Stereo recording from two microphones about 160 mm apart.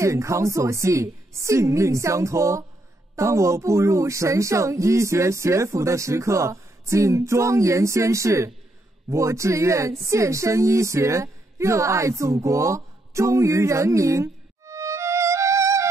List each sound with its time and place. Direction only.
0.0 s a woman's voice: 20° right (ahead or behind)